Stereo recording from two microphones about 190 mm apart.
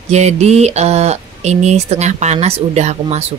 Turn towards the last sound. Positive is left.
turn(degrees=-35)  # may be behind; listen again after turning